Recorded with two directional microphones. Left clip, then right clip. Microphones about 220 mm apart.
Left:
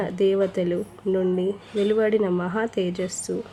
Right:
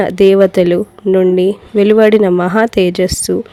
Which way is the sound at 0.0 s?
40° right (ahead or behind).